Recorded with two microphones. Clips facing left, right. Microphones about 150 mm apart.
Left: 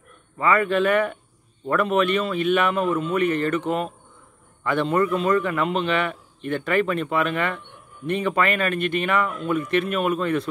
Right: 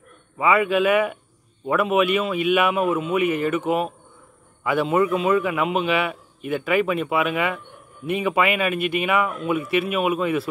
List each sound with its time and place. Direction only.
0.4 s a man's voice: 5° right (ahead or behind)